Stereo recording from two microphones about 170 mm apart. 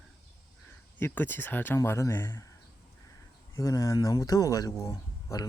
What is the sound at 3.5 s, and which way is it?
Speech, 20° left (ahead or behind).